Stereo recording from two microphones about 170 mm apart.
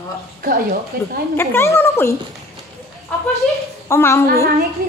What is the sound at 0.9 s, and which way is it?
Speech, 65° right (ahead or behind).